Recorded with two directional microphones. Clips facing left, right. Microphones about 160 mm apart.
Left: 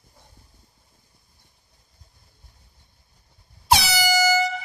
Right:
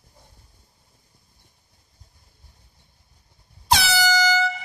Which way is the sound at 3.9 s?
10° left (ahead or behind).